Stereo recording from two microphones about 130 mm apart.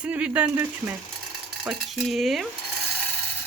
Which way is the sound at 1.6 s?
Centre (ahead or behind).